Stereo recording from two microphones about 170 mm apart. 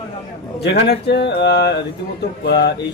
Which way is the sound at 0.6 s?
80° left.